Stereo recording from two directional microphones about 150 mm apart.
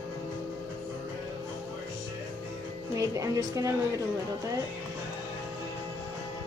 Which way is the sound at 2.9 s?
20° right (ahead or behind).